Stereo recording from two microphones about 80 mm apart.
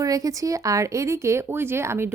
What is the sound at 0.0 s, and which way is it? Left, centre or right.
A woman's voice, right.